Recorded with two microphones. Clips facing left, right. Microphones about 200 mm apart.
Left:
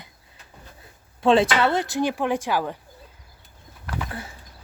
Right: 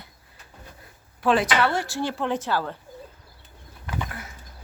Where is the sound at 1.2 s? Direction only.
25° left (ahead or behind).